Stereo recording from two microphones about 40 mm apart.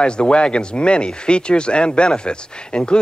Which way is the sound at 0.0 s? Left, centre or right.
Left.